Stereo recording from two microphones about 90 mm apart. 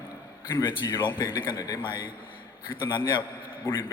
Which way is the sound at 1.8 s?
60° left (ahead or behind).